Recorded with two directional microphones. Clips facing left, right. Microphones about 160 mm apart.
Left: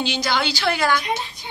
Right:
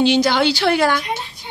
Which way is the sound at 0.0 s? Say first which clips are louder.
Right 8 dB; 65° right (ahead or behind).